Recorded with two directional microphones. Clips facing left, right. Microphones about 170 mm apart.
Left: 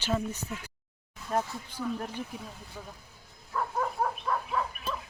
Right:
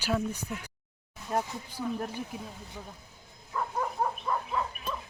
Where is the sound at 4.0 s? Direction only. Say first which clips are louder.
Even; 10° right (ahead or behind).